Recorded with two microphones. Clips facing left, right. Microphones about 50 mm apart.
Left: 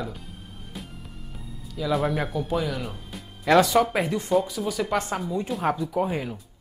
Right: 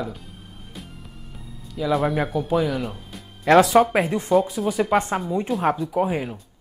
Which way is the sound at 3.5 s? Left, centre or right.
Centre.